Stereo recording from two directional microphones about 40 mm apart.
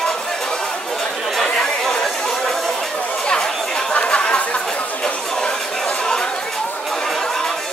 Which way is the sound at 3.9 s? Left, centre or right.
Left.